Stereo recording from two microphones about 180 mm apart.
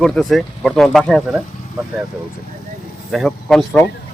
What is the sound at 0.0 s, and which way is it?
Speech, 5° left (ahead or behind).